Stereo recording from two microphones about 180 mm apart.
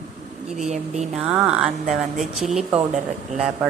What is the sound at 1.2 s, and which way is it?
Speech, 5° right (ahead or behind).